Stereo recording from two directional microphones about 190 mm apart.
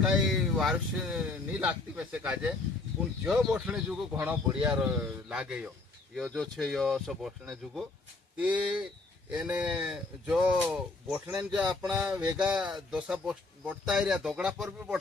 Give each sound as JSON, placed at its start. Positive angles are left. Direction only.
{"t": 0.0, "sound": "speech", "side_deg": 0}